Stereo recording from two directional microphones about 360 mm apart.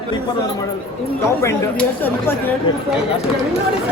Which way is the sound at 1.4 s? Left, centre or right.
Centre.